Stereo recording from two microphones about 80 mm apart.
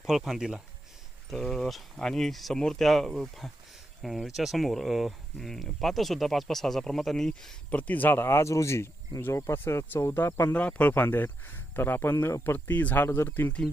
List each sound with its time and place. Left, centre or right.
0.0 s speech: centre
1.3 s speech: centre
7.7 s speech: centre
10.5 s speech: centre